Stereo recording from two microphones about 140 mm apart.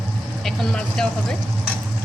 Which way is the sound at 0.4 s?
5° left (ahead or behind).